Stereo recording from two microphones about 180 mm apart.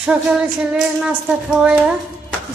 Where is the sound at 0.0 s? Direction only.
5° right (ahead or behind).